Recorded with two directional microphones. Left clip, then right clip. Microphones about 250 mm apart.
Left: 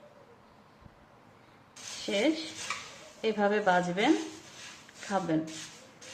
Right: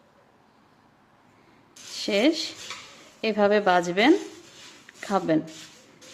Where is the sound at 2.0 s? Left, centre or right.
Right.